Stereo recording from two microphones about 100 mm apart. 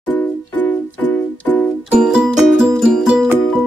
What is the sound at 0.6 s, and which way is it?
Music, 20° left (ahead or behind).